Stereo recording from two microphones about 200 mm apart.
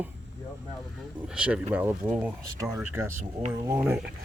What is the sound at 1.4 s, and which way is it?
Speech, 5° right (ahead or behind).